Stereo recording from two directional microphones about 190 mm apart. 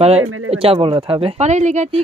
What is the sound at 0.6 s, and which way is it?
Speech, 25° right (ahead or behind).